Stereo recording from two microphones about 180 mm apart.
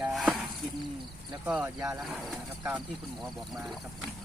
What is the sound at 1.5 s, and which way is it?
Speech, 5° right (ahead or behind).